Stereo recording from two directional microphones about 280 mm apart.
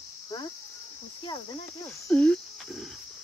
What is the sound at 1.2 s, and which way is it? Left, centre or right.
Cricket, centre.